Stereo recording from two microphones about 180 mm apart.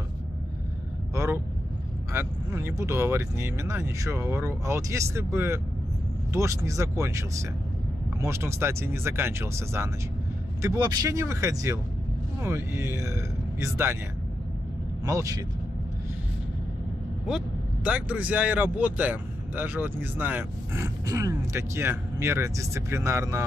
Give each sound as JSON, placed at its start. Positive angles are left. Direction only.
{"t": 1.1, "sound": "vehicle", "side_deg": -15}
{"t": 2.1, "sound": "speech", "side_deg": -15}
{"t": 15.0, "sound": "speech", "side_deg": -20}
{"t": 17.8, "sound": "speech", "side_deg": -10}